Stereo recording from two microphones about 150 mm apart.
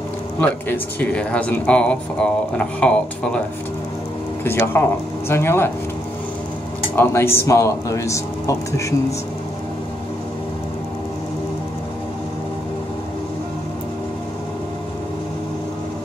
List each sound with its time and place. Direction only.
0.4 s speech: 10° left (ahead or behind)
4.8 s speech: 15° left (ahead or behind)
7.0 s a man's voice: 15° left (ahead or behind)